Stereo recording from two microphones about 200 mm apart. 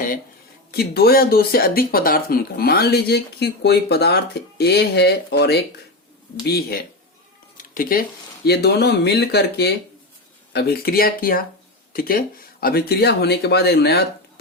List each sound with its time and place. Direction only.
0.7 s speech: 50° left (ahead or behind)
7.5 s a sound: 40° left (ahead or behind)
8.4 s speech: 55° left (ahead or behind)